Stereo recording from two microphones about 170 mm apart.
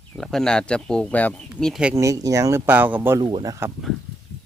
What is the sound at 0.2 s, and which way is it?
Speech, centre (ahead or behind).